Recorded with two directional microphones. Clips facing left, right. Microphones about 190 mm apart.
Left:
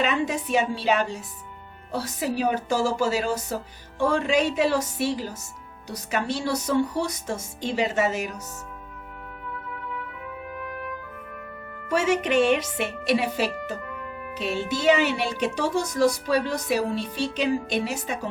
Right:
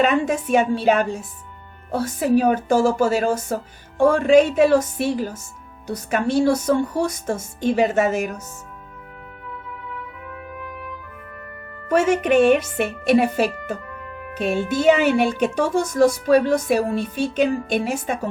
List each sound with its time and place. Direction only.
0.0 s speech: 50° right (ahead or behind)
10.4 s trumpet: centre (ahead or behind)
11.9 s speech: 50° right (ahead or behind)